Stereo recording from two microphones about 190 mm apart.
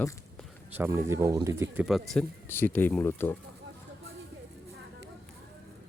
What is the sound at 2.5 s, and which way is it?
Speech, 10° left (ahead or behind).